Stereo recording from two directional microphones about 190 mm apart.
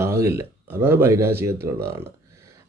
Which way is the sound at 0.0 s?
15° right (ahead or behind).